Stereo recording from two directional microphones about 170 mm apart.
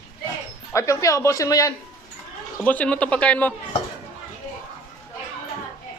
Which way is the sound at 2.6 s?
10° left (ahead or behind).